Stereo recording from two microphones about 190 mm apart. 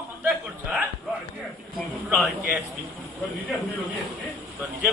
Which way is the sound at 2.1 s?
5° right (ahead or behind).